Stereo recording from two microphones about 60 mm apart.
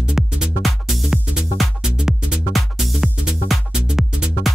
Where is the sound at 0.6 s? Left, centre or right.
Centre.